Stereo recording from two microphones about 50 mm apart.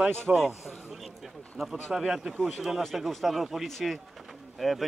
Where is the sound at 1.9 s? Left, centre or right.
Centre.